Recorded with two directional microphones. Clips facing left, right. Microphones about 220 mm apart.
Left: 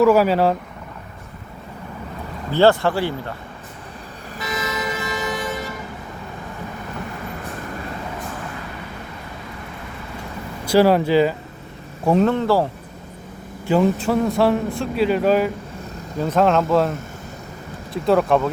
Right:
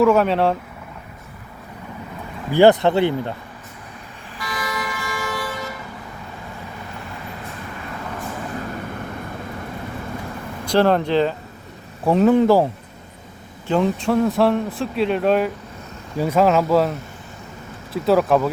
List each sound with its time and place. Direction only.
0.0 s a man's voice: 5° left (ahead or behind)
2.5 s speech: 15° right (ahead or behind)
4.4 s vehicle: 20° left (ahead or behind)
10.7 s a man's voice: 5° left (ahead or behind)
12.3 s speech: 15° right (ahead or behind)
13.7 s a man's voice: 5° left (ahead or behind)
17.9 s a man's voice: 5° right (ahead or behind)